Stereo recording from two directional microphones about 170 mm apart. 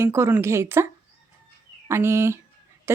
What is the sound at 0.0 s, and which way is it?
Speech, 15° right (ahead or behind).